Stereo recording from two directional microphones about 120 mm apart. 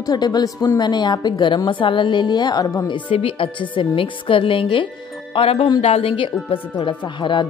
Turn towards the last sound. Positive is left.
turn(degrees=45)  # may be behind; listen again after turning